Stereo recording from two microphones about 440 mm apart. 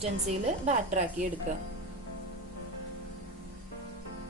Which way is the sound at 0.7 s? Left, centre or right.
Centre.